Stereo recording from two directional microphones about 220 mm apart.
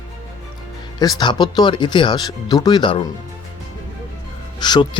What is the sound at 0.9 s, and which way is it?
Speech, 20° left (ahead or behind).